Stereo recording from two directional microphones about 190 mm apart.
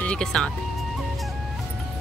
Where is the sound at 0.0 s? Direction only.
5° left (ahead or behind).